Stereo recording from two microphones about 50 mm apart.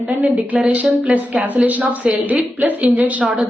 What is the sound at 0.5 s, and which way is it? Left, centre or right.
Speech, right.